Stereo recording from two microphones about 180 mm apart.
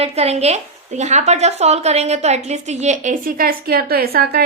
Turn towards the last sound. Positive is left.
turn(degrees=-60)  # may be behind; listen again after turning